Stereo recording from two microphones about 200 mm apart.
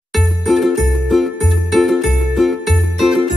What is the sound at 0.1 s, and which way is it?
Music, centre (ahead or behind).